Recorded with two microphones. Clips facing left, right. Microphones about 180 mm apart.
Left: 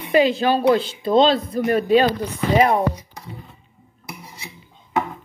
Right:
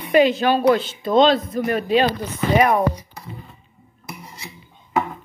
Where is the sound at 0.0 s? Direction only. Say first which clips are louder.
Right 1 dB; 30° left (ahead or behind).